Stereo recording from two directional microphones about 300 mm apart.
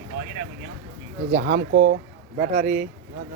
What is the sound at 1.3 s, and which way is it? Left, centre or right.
Speech, right.